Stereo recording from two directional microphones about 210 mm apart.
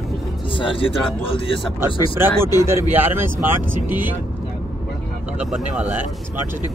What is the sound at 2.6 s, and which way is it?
Speech, 10° right (ahead or behind).